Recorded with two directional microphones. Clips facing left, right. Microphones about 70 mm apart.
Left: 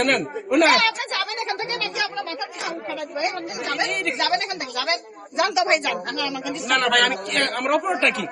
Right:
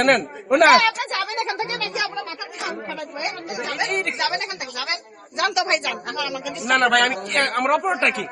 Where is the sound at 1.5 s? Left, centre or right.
Centre.